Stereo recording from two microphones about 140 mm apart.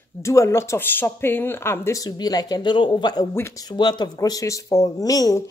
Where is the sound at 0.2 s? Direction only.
20° left (ahead or behind).